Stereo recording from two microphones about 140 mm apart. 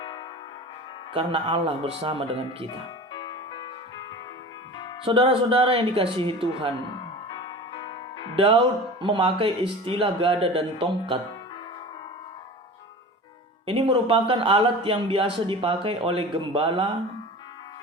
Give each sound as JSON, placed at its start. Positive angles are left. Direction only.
{"t": 1.1, "sound": "speech", "side_deg": -40}
{"t": 3.1, "sound": "music", "side_deg": 30}
{"t": 5.0, "sound": "speech", "side_deg": -40}
{"t": 7.3, "sound": "music", "side_deg": 30}
{"t": 8.4, "sound": "speech", "side_deg": -35}
{"t": 13.7, "sound": "speech", "side_deg": -35}